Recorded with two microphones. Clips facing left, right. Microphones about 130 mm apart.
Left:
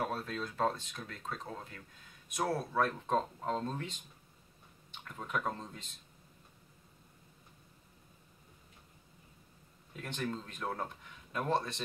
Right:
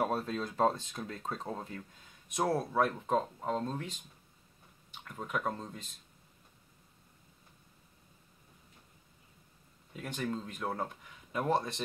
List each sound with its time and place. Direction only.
0.0 s speech: 25° right (ahead or behind)
2.3 s speech: 20° right (ahead or behind)
4.9 s speech: 5° right (ahead or behind)
9.9 s speech: 5° right (ahead or behind)